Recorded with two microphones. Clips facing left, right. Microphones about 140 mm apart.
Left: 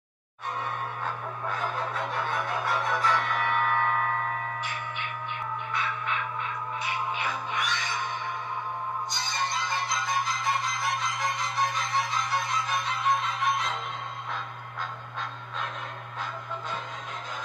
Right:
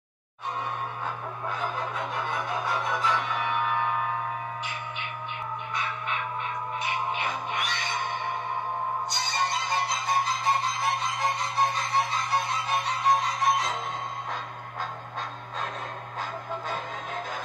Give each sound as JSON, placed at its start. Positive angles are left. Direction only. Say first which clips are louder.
{"t": 1.0, "sound": "music", "louder": "even", "side_deg": -20}
{"t": 6.8, "sound": "music", "louder": "right 1 dB", "side_deg": -20}
{"t": 16.2, "sound": "music", "louder": "right 2 dB", "side_deg": -45}